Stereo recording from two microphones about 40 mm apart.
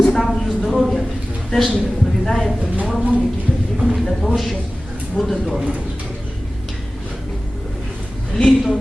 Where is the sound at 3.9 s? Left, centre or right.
Centre.